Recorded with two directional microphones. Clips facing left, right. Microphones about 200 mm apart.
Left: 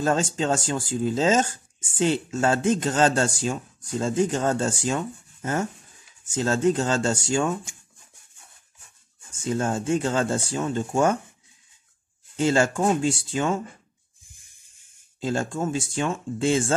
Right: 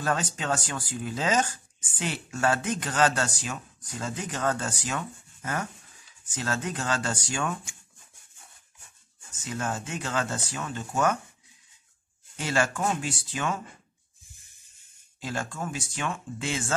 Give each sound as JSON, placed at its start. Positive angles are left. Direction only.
{"t": 0.0, "sound": "speech", "side_deg": 25}
{"t": 9.3, "sound": "speech", "side_deg": 30}
{"t": 12.4, "sound": "speech", "side_deg": 25}
{"t": 14.3, "sound": "a sound", "side_deg": 15}
{"t": 15.1, "sound": "speech", "side_deg": 25}